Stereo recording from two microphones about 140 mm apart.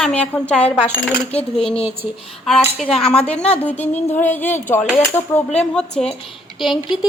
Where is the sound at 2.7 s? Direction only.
45° left (ahead or behind).